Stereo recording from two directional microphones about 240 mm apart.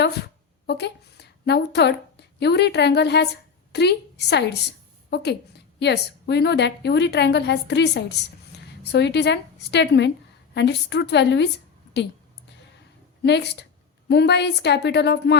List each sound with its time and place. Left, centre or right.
0.7 s a woman's voice: left
13.2 s a woman's voice: left